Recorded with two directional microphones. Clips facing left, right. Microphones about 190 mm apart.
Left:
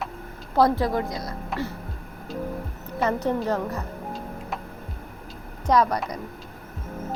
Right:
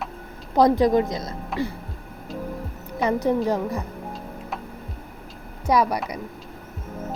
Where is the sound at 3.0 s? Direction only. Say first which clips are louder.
Right 3 dB; 10° right (ahead or behind).